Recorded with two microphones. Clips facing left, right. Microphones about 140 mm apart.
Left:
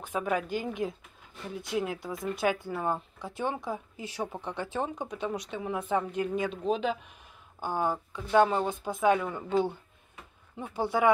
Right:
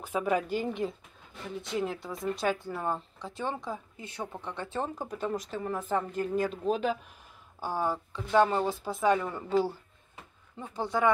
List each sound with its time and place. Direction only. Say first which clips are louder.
0.0 s a woman's voice: right 2 dB; 10° right (ahead or behind)
0.4 s speech: right 1 dB; 5° left (ahead or behind)
10.6 s speech: left 2 dB; 5° left (ahead or behind)